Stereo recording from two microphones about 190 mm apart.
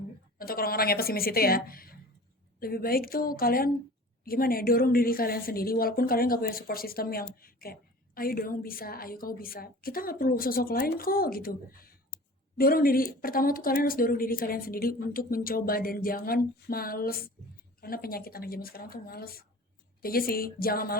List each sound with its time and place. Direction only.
0.3 s a woman's voice: 50° left (ahead or behind)